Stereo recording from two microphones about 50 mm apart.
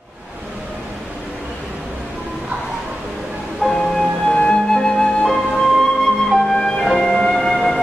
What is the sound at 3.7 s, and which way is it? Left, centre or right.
Music, centre.